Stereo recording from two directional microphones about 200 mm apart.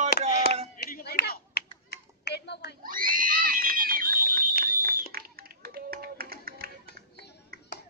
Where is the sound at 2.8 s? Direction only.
45° right (ahead or behind).